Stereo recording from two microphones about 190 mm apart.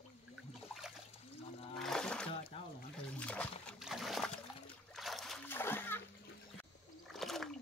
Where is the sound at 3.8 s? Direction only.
Centre (ahead or behind).